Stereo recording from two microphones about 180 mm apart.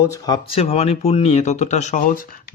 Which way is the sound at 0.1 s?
25° left (ahead or behind).